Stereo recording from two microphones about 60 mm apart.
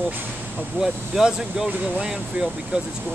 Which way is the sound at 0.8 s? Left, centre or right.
Centre.